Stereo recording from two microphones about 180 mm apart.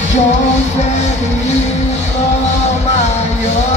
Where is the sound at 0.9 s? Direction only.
40° left (ahead or behind).